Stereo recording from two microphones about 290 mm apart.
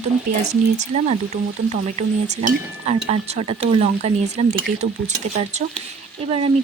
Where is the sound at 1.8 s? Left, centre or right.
Right.